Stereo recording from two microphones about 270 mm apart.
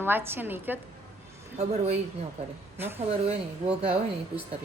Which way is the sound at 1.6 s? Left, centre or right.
Right.